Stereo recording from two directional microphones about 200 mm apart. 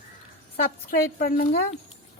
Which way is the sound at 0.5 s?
45° left (ahead or behind).